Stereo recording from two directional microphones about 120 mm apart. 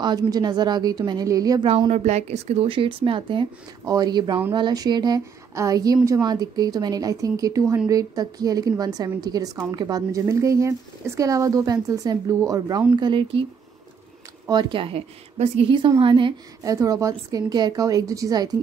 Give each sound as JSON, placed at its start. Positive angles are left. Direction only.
{"t": 0.0, "sound": "speech", "side_deg": -35}
{"t": 1.6, "sound": "speech", "side_deg": -45}
{"t": 1.9, "sound": "speech", "side_deg": -70}
{"t": 3.8, "sound": "a woman's voice", "side_deg": -35}
{"t": 12.9, "sound": "speech", "side_deg": -40}
{"t": 14.5, "sound": "speech", "side_deg": -40}
{"t": 16.0, "sound": "speech", "side_deg": -45}
{"t": 16.6, "sound": "a woman's voice", "side_deg": -30}